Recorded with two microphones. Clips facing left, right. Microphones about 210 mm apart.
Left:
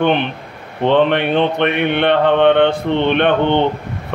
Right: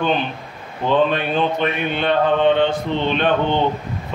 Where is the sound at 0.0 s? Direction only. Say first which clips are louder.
Left 5 dB; 65° left (ahead or behind).